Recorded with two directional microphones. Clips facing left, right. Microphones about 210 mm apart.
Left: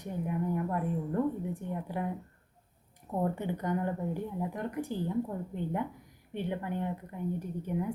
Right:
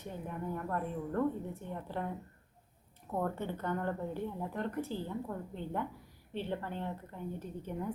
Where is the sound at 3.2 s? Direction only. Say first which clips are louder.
Left 4 dB; 15° left (ahead or behind).